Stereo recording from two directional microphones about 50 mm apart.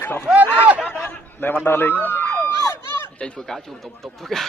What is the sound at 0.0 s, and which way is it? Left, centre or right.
Speech, left.